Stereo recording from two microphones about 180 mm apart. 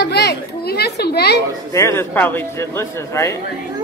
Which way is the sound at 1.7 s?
15° left (ahead or behind).